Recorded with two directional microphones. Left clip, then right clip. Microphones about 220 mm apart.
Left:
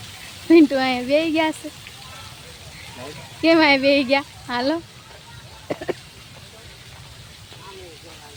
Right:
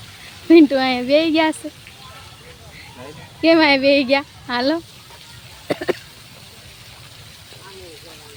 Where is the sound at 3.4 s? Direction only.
10° right (ahead or behind).